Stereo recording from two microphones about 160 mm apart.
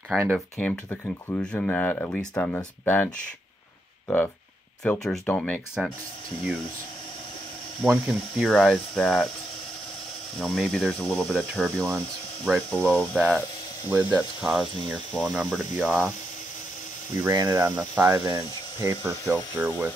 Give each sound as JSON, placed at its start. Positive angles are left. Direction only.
{"t": 0.1, "sound": "speech", "side_deg": 5}
{"t": 4.8, "sound": "speech", "side_deg": 0}
{"t": 7.8, "sound": "speech", "side_deg": 0}
{"t": 10.4, "sound": "speech", "side_deg": 0}
{"t": 13.8, "sound": "speech", "side_deg": -10}
{"t": 17.2, "sound": "speech", "side_deg": -20}